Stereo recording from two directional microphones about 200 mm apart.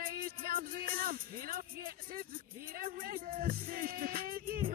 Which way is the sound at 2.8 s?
45° right (ahead or behind).